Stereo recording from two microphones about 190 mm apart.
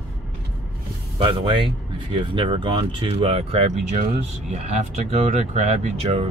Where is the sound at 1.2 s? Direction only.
25° right (ahead or behind).